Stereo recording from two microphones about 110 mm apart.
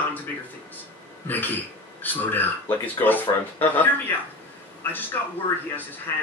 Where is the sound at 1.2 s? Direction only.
15° left (ahead or behind).